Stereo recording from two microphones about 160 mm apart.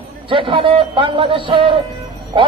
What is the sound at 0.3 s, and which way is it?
A man's voice, 30° right (ahead or behind).